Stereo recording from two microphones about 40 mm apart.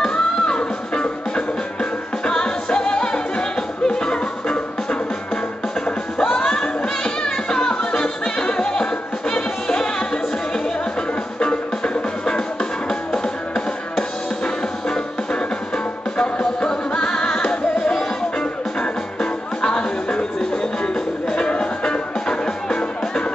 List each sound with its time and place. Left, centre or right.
0.0 s music: centre
6.1 s music: centre
11.3 s music: left
14.4 s music: centre
19.6 s music: left